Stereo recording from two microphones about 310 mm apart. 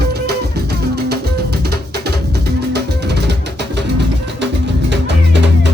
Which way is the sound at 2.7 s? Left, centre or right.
Right.